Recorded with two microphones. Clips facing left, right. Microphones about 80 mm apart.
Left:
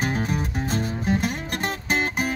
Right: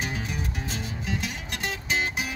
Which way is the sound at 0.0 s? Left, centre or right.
Left.